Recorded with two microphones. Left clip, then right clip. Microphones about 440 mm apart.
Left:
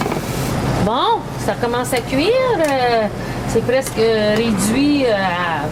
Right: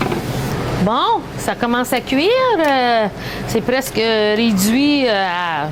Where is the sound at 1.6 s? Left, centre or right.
Right.